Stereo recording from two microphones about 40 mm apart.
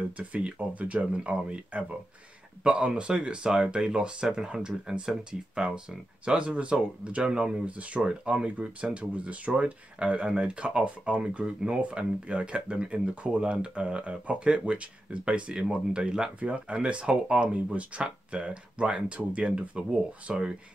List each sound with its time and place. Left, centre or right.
0.2 s speech: right
7.2 s speech: centre
7.5 s speech: right